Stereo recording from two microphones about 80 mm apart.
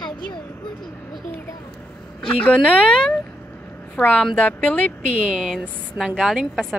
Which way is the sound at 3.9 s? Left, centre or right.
Centre.